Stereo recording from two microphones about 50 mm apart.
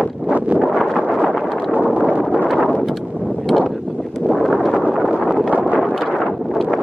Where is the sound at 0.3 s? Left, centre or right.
Right.